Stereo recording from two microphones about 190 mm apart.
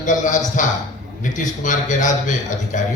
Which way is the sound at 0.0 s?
40° left (ahead or behind).